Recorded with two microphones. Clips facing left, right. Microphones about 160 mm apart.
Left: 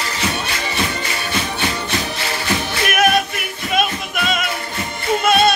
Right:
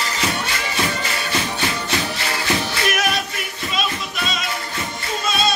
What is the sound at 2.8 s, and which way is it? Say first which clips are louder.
Music: left 9 dB; 55° left (ahead or behind).